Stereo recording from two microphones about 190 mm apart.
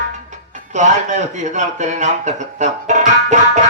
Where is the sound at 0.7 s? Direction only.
40° right (ahead or behind).